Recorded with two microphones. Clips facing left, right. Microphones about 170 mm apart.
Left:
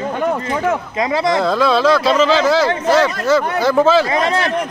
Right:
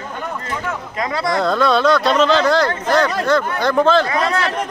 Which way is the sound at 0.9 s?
20° left (ahead or behind).